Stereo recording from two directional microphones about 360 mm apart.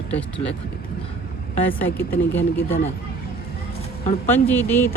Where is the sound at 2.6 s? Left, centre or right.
Centre.